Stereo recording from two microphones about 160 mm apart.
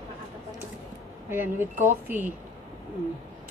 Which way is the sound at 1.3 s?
15° right (ahead or behind).